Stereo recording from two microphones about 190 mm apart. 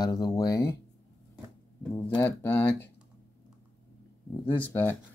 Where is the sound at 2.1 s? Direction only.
10° left (ahead or behind).